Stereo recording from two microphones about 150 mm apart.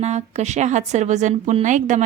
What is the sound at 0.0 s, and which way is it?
A woman's voice, 45° right (ahead or behind).